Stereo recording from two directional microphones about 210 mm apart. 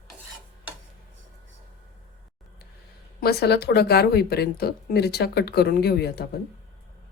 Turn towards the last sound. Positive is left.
turn(degrees=50)  # may be behind; listen again after turning